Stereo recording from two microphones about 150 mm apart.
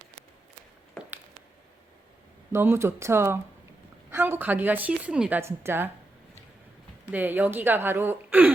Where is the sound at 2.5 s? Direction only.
15° right (ahead or behind).